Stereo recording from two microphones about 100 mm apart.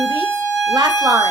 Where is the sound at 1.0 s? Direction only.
40° right (ahead or behind).